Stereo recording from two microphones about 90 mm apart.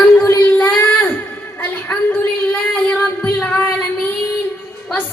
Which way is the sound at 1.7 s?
20° left (ahead or behind).